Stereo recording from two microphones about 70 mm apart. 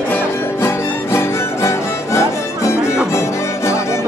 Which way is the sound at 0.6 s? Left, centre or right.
Left.